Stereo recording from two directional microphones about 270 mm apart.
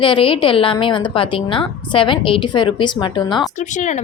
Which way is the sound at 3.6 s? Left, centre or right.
Left.